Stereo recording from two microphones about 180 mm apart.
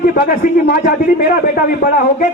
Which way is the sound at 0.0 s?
55° left (ahead or behind).